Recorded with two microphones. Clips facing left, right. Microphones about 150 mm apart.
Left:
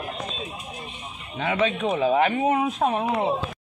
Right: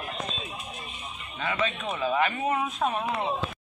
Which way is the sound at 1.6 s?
65° left (ahead or behind).